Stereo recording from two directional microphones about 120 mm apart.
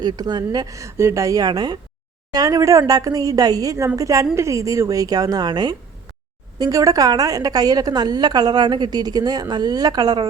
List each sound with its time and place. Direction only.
0.0 s a woman's voice: 35° right (ahead or behind)